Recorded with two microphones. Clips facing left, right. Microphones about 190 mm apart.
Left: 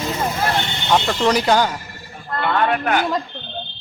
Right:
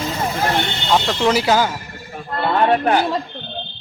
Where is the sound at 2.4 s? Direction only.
30° right (ahead or behind).